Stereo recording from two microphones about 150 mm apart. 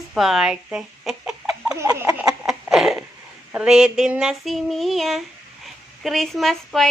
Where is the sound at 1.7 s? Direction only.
20° right (ahead or behind).